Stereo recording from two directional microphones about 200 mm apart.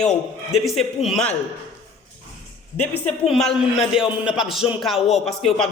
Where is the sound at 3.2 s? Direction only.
Centre (ahead or behind).